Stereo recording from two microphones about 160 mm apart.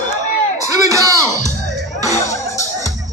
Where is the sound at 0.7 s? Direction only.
20° right (ahead or behind).